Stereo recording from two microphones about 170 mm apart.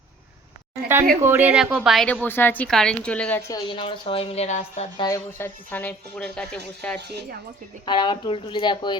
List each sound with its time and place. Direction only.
1.2 s a woman's voice: 10° right (ahead or behind); by 3.4 s 10° left (ahead or behind)
3.5 s a woman's voice: 30° left (ahead or behind)
4.9 s speech: 20° left (ahead or behind)
7.9 s speech: 25° left (ahead or behind)